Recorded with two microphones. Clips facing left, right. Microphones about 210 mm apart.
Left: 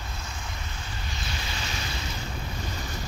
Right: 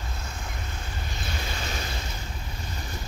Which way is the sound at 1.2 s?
55° right (ahead or behind).